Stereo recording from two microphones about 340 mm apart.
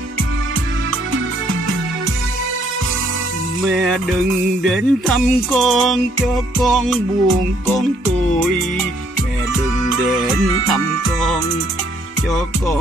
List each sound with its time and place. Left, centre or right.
3.6 s music: centre
10.5 s music: centre